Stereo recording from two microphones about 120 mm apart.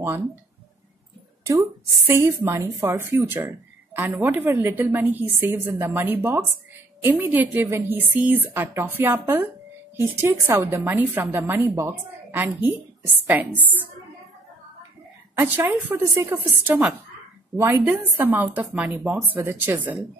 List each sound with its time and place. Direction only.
2.0 s a woman's voice: 20° right (ahead or behind)
10.9 s speech: 15° right (ahead or behind)
15.3 s a woman's voice: 15° right (ahead or behind)